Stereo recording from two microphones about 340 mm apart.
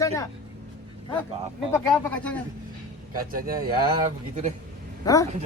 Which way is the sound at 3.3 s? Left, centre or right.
Right.